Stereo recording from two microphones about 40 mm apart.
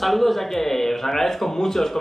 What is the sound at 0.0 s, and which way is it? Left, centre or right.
A man's voice, centre.